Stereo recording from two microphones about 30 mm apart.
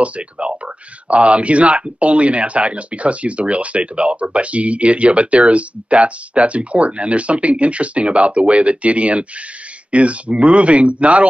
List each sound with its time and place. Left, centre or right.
0.0 s speech: right